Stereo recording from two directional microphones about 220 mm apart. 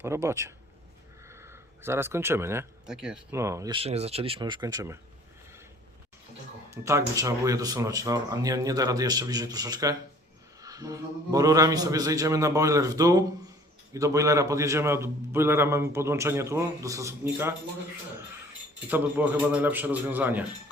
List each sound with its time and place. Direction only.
0.0 s speech: 10° right (ahead or behind)
6.7 s speech: 15° right (ahead or behind)
18.9 s speech: 5° right (ahead or behind)